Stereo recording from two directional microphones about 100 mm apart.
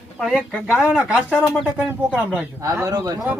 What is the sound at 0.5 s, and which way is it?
Speech, 15° left (ahead or behind).